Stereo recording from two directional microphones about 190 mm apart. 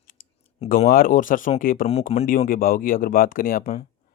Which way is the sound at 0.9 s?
50° left (ahead or behind).